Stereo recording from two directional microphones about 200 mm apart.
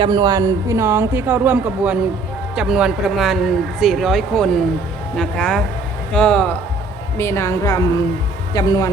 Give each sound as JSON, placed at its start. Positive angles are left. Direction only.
{"t": 0.0, "sound": "a woman's voice", "side_deg": -20}